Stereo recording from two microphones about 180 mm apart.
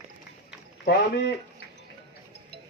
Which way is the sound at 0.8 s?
65° left (ahead or behind).